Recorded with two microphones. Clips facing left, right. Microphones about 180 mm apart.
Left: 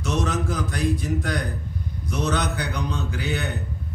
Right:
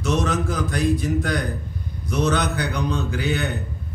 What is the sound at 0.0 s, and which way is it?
Speech, 70° right (ahead or behind).